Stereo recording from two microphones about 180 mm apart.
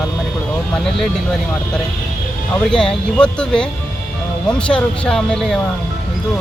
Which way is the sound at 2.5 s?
5° left (ahead or behind).